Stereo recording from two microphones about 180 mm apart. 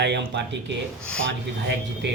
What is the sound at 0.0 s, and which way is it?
Speech, 70° right (ahead or behind).